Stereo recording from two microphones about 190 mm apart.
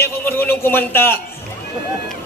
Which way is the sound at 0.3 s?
10° left (ahead or behind).